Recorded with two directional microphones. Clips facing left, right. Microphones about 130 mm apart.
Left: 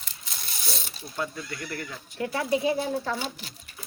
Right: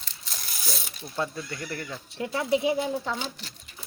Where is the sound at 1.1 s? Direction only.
25° right (ahead or behind).